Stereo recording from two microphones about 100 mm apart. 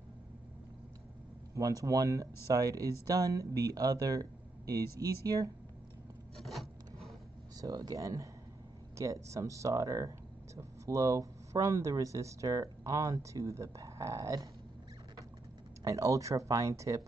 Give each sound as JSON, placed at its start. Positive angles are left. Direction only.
{"t": 1.5, "sound": "speech", "side_deg": -35}
{"t": 6.3, "sound": "rub", "side_deg": 0}
{"t": 7.6, "sound": "speech", "side_deg": -40}
{"t": 15.8, "sound": "speech", "side_deg": -35}